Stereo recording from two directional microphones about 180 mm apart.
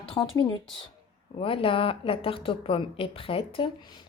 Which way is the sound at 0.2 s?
30° left (ahead or behind).